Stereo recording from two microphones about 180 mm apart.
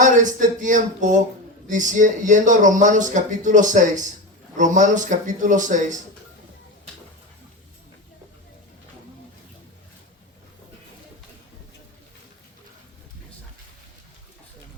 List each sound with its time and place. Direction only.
0.0 s speech: 45° right (ahead or behind)